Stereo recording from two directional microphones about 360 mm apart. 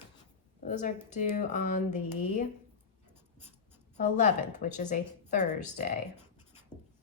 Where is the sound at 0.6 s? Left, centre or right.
Left.